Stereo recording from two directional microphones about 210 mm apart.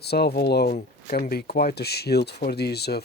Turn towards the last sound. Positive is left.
turn(degrees=50)  # may be behind; listen again after turning